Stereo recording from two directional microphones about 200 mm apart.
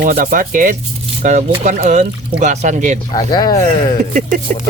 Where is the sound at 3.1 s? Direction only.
20° left (ahead or behind).